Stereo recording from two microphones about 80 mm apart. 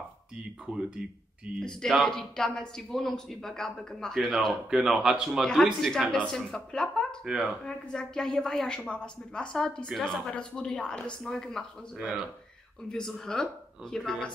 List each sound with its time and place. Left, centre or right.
0.7 s speech: centre
2.0 s a woman's voice: centre
7.2 s speech: centre
7.6 s a woman's voice: centre
12.9 s a woman's voice: centre